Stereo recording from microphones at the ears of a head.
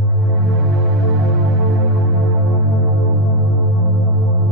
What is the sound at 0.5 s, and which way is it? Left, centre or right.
Music, right.